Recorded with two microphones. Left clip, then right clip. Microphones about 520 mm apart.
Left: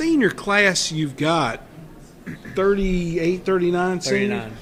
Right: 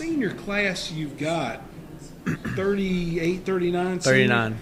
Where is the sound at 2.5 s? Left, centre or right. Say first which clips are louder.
Left 7 dB; left.